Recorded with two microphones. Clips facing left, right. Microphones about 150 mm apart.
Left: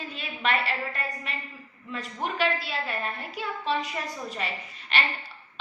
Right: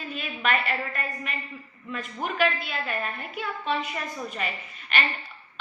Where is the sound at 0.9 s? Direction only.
30° left (ahead or behind).